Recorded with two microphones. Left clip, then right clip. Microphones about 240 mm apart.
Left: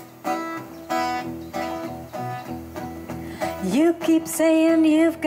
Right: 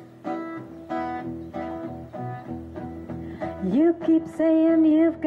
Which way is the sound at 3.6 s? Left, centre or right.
Centre.